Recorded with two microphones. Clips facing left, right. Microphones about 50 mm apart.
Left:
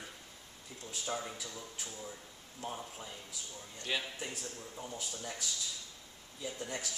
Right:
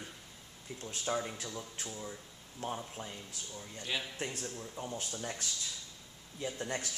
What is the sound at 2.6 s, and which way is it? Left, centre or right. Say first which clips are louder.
Speech: right 3 dB; right.